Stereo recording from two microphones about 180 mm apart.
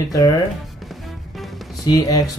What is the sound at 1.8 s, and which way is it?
Speech, 20° left (ahead or behind).